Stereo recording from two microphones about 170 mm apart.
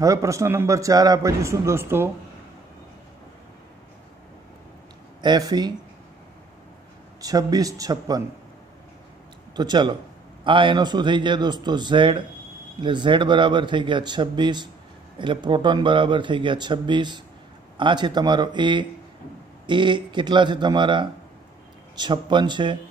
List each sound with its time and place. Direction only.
0.0 s a man's voice: 20° right (ahead or behind)
5.2 s a man's voice: 25° right (ahead or behind)
7.2 s a man's voice: 20° right (ahead or behind)
9.6 s a man's voice: 25° right (ahead or behind)